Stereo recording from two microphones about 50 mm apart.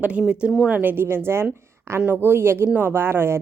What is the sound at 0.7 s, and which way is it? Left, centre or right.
A woman's voice, right.